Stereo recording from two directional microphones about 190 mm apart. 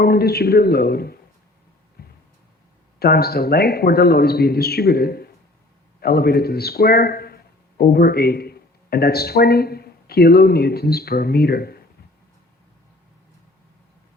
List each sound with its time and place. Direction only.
0.0 s a man's voice: 55° left (ahead or behind)
2.0 s a sound: 55° left (ahead or behind)
3.0 s a man's voice: 55° left (ahead or behind)